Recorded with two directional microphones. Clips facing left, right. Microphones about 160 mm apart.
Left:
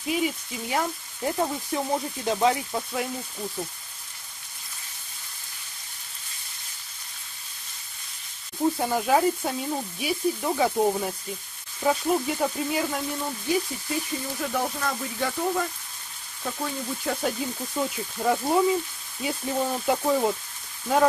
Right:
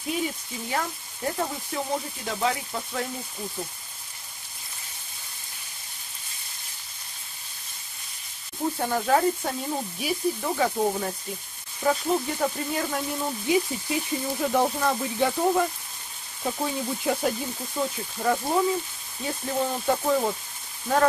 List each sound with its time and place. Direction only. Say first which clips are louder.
0.0 s speech: left 3 dB; 5° left (ahead or behind)
0.7 s speech: left 2 dB; 15° left (ahead or behind)
8.7 s sizzle: right 2 dB; 10° left (ahead or behind)
13.5 s speech: right 2 dB; 15° right (ahead or behind)
17.2 s speech: even; centre (ahead or behind)